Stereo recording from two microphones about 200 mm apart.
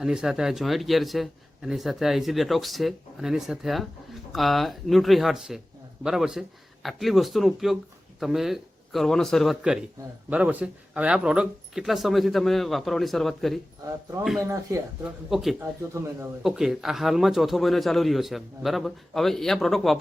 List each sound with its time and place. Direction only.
0.0 s speech: 5° right (ahead or behind)
13.8 s speech: 15° right (ahead or behind)
15.3 s speech: centre (ahead or behind)
15.6 s speech: 15° right (ahead or behind)
16.4 s speech: 5° right (ahead or behind)